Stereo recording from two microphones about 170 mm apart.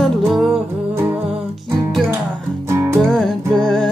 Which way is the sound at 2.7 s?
15° right (ahead or behind).